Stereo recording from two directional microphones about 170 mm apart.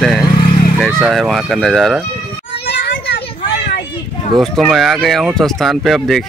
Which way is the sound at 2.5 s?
70° left (ahead or behind).